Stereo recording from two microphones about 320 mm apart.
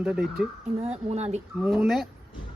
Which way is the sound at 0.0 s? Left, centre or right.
Centre.